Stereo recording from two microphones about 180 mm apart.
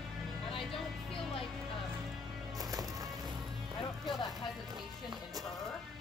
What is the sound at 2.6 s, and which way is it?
Music, 20° right (ahead or behind).